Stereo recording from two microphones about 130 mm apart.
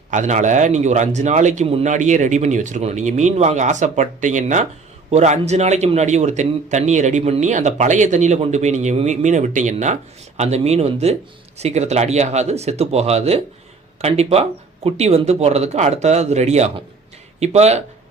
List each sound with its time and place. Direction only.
0.1 s a man's voice: 70° right (ahead or behind)